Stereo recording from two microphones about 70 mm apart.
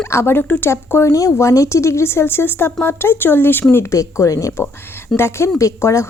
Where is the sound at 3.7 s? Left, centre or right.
Left.